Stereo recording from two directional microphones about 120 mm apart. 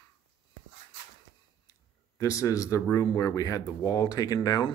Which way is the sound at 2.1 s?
25° left (ahead or behind).